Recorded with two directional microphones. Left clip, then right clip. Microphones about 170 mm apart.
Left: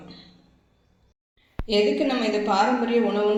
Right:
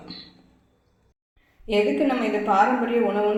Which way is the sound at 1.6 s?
5° left (ahead or behind).